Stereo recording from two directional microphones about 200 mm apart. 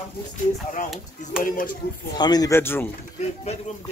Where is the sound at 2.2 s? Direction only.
20° left (ahead or behind).